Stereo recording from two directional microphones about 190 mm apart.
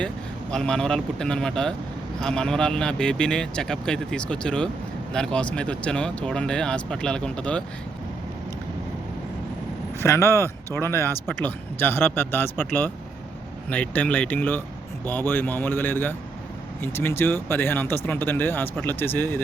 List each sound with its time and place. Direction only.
0.5 s speech: 5° left (ahead or behind)
10.0 s speech: 15° left (ahead or behind)